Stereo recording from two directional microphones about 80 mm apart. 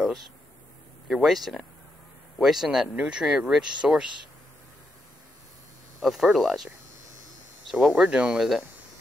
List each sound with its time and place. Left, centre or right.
1.0 s speech: centre
6.0 s speech: centre